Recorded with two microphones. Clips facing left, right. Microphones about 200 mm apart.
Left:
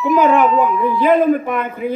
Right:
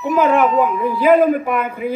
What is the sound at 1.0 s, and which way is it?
Speech, 10° right (ahead or behind).